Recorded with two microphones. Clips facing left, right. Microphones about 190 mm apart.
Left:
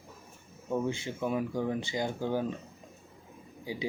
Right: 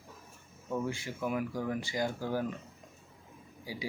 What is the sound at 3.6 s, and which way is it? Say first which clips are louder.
Speech: left 5 dB; 20° left (ahead or behind).